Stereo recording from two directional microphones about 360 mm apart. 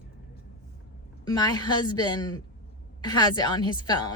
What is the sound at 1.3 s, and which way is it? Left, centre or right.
A woman's voice, centre.